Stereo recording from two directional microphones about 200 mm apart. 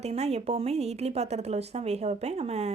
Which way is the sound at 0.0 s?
30° right (ahead or behind).